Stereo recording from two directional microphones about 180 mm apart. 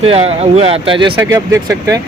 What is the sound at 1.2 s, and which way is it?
Speech, 15° right (ahead or behind).